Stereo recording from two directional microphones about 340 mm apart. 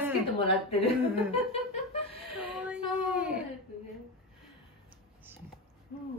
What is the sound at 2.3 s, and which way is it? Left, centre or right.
Child singing, centre.